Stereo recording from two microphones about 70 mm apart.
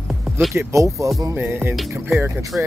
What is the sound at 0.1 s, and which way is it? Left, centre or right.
Music, centre.